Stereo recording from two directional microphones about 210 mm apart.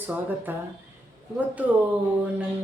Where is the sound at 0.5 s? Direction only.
10° right (ahead or behind).